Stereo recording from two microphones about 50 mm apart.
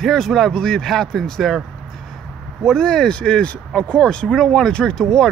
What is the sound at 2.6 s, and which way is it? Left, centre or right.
Speech, centre.